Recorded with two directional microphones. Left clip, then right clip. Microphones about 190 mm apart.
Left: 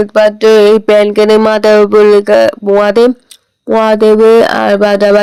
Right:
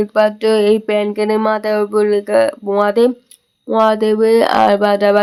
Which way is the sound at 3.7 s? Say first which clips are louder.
Left 6 dB; 25° left (ahead or behind).